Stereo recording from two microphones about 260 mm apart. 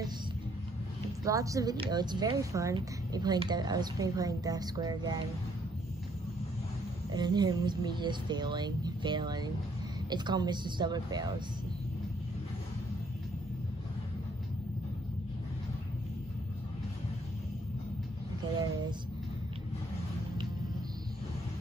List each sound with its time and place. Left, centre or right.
1.2 s speech: centre
7.1 s speech: centre